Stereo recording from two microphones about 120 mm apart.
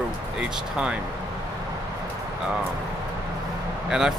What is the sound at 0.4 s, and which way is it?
Speech, 5° right (ahead or behind).